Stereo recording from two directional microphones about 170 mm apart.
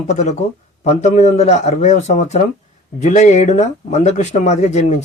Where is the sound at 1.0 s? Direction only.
40° left (ahead or behind).